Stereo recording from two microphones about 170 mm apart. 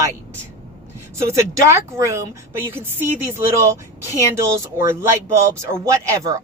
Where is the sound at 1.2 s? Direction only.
20° right (ahead or behind).